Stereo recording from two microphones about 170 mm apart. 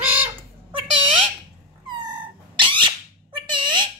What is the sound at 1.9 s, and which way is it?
Cat, 25° right (ahead or behind).